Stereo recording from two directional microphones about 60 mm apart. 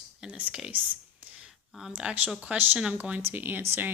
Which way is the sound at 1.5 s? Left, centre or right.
Centre.